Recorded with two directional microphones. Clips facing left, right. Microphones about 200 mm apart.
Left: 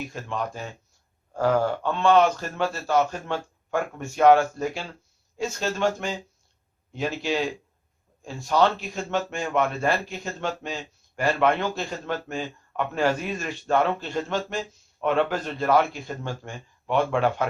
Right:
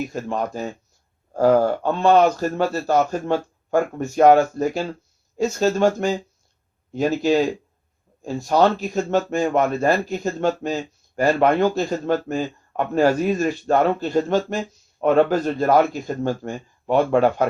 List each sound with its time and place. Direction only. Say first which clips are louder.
0.1 s speech: right 6 dB; 40° right (ahead or behind)